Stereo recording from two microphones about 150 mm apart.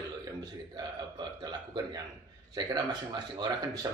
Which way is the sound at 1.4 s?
30° right (ahead or behind).